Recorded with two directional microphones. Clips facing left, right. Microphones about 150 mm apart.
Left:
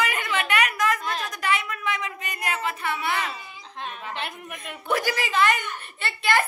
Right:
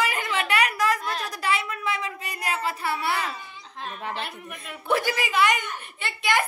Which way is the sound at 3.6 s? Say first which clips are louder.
Left 3 dB; centre (ahead or behind).